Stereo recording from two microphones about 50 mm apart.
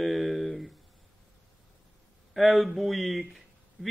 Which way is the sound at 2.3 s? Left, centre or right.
Centre.